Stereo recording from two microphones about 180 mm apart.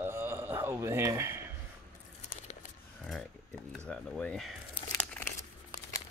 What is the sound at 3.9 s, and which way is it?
Speech, 5° left (ahead or behind).